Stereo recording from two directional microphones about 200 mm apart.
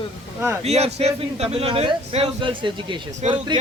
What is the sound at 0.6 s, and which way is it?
A man's voice, 30° right (ahead or behind).